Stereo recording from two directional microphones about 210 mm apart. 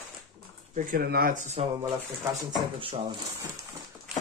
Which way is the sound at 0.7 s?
40° right (ahead or behind).